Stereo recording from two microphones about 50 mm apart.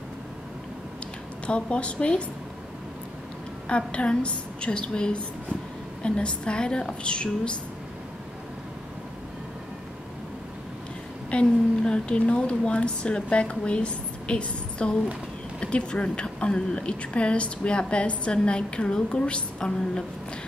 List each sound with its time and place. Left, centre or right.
1.4 s a woman's voice: left
3.6 s a woman's voice: left
11.2 s a woman's voice: left